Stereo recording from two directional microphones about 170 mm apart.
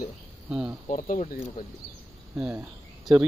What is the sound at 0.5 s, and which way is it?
Speech, 5° right (ahead or behind).